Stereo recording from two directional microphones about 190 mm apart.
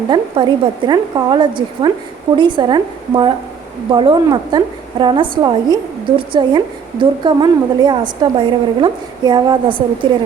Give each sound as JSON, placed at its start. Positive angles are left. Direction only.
{"t": 0.1, "sound": "a woman's voice", "side_deg": -25}